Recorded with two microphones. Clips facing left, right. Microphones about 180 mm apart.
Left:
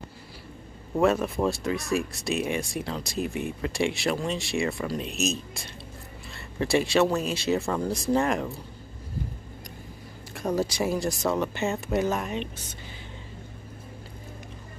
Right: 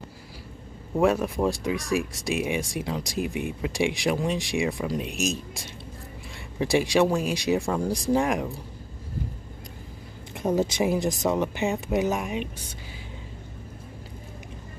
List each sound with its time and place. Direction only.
0.9 s speech: 10° right (ahead or behind)
10.3 s speech: 20° right (ahead or behind)